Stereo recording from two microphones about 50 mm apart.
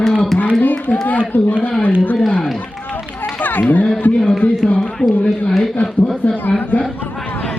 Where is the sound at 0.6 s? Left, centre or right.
Left.